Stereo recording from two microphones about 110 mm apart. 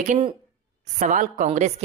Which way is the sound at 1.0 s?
90° right.